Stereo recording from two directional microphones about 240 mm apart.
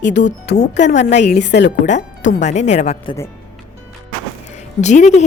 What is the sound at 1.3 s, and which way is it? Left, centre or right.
Speech, left.